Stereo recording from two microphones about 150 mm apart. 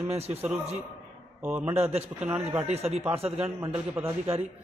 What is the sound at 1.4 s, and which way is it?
Speech, 10° right (ahead or behind).